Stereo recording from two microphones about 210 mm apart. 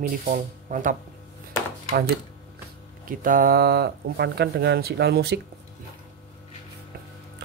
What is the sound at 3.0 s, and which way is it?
Speech, 40° right (ahead or behind).